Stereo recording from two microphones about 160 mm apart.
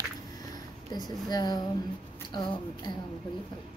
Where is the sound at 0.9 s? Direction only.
25° left (ahead or behind).